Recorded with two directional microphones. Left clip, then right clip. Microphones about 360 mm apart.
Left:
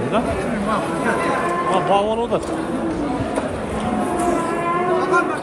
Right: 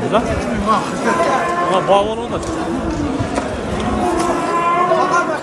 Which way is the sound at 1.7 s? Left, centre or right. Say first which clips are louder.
Right 4 dB; centre.